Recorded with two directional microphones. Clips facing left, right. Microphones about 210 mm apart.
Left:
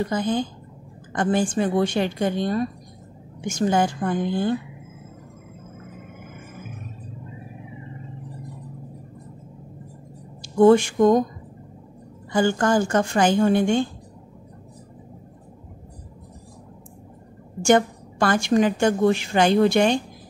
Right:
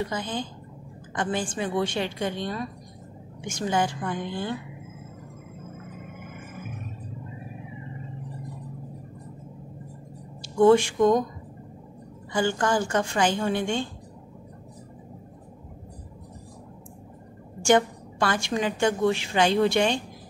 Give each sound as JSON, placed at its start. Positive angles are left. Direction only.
{"t": 0.1, "sound": "a woman's voice", "side_deg": 45}
{"t": 10.6, "sound": "a woman's voice", "side_deg": 40}
{"t": 12.3, "sound": "a woman's voice", "side_deg": 40}
{"t": 17.6, "sound": "a woman's voice", "side_deg": 45}